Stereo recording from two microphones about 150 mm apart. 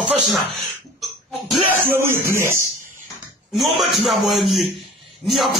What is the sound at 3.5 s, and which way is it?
Speech, centre (ahead or behind).